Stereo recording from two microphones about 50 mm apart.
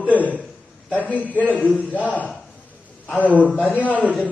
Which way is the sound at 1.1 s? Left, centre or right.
Left.